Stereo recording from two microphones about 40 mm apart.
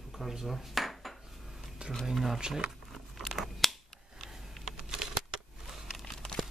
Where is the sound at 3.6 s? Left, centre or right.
Centre.